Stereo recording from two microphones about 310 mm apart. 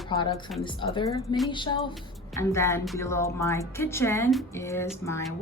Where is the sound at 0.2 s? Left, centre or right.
Centre.